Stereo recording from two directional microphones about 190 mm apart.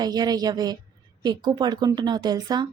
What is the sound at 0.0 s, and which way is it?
A woman's voice, 20° right (ahead or behind).